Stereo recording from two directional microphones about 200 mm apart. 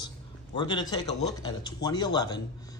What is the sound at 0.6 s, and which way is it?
Speech, 20° left (ahead or behind).